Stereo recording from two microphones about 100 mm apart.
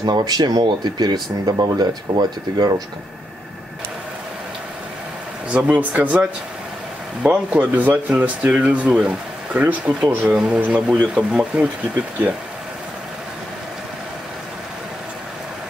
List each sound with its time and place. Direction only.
0.0 s speech: 45° right (ahead or behind)
5.5 s speech: 15° right (ahead or behind)
7.2 s speech: 15° right (ahead or behind)